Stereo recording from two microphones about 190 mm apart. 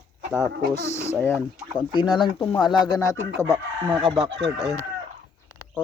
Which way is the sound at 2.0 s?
25° left (ahead or behind).